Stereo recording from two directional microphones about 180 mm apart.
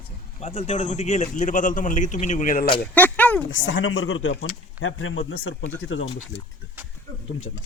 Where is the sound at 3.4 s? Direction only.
90° left.